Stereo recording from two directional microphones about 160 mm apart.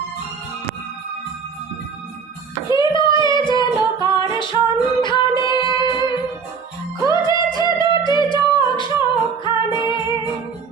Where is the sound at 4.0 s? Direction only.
25° left (ahead or behind).